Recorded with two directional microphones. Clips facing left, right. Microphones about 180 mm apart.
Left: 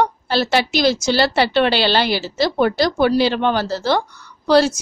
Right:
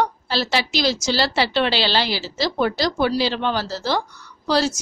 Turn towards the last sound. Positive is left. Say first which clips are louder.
# left 6 dB
turn(degrees=60)  # may be behind; listen again after turning